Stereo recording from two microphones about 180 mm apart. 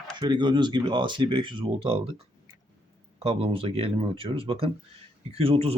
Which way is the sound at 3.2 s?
30° right (ahead or behind).